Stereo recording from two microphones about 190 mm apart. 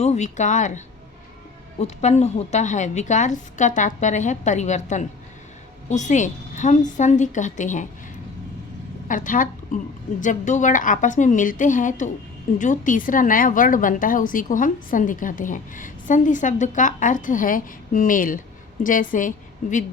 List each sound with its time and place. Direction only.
0.0 s a woman's voice: 35° left (ahead or behind)
1.8 s a woman's voice: 35° left (ahead or behind)
9.0 s a woman's voice: 45° left (ahead or behind)